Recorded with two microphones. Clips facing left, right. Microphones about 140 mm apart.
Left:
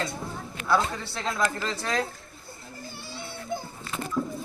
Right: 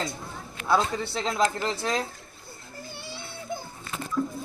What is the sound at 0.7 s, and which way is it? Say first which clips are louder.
A man's voice: right 1 dB; 20° right (ahead or behind).